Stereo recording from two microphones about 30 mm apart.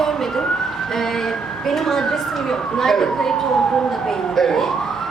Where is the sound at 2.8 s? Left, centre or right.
Centre.